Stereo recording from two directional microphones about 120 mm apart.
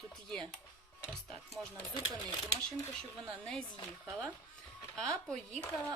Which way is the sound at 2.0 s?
55° left (ahead or behind).